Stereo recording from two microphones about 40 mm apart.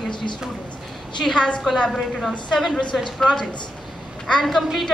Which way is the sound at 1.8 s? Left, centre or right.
Centre.